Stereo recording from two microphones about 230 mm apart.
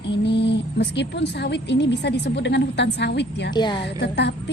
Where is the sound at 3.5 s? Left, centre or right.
Centre.